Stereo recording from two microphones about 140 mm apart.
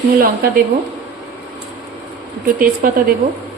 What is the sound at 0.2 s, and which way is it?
Speech, 90° right.